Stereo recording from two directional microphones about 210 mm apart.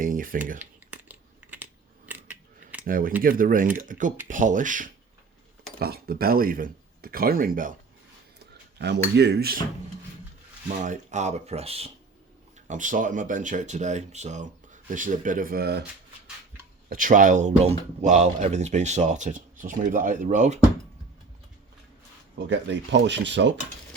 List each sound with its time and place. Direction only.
0.0 s speech: 40° right (ahead or behind)
0.6 s typing: 10° right (ahead or behind)
2.0 s scissors: 10° right (ahead or behind)
2.8 s speech: 40° right (ahead or behind)
8.4 s speech: 55° right (ahead or behind)
10.7 s speech: 35° right (ahead or behind)
16.9 s speech: 40° right (ahead or behind)
22.4 s speech: 55° right (ahead or behind)